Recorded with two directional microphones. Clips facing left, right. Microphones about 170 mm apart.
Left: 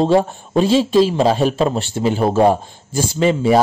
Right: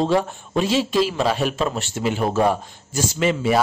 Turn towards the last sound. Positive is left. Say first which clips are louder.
# left 5 dB
turn(degrees=30)  # may be behind; listen again after turning